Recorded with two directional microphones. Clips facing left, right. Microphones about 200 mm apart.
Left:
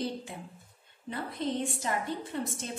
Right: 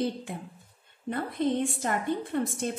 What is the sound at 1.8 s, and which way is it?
Speech, 55° right (ahead or behind).